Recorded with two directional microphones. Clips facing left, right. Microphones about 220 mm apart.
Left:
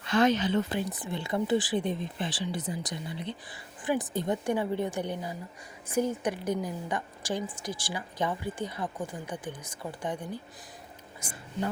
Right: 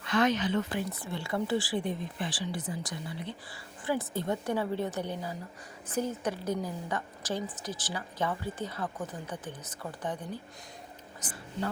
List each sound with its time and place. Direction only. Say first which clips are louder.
0.0 s speech: left 3 dB; 30° left (ahead or behind); by 11.4 s 10° left (ahead or behind)